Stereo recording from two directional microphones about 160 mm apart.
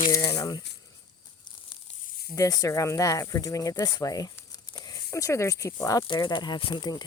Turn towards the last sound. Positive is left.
turn(degrees=25)  # may be behind; listen again after turning